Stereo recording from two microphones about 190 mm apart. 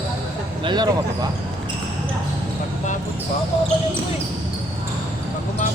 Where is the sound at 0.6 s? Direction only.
20° right (ahead or behind).